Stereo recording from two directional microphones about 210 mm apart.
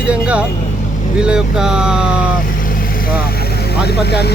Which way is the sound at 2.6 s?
40° left (ahead or behind).